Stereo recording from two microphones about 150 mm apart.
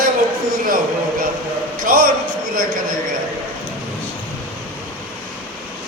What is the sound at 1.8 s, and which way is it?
Speech, 70° right (ahead or behind).